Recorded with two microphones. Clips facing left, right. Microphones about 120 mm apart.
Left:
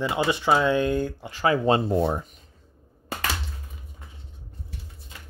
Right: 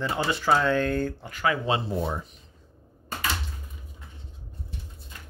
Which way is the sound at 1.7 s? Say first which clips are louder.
Left 6 dB; 50° left (ahead or behind).